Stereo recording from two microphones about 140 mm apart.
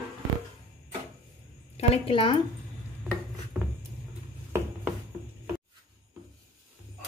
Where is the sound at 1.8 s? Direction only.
40° left (ahead or behind).